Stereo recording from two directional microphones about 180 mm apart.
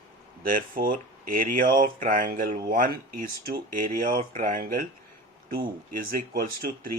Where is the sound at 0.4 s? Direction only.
50° right (ahead or behind).